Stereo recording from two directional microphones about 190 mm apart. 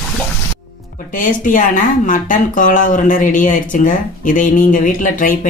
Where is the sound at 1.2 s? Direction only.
45° left (ahead or behind).